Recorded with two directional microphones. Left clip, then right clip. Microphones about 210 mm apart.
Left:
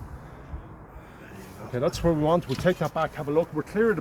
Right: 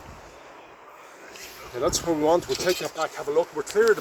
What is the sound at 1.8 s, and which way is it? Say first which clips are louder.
Speech: even; 35° right (ahead or behind).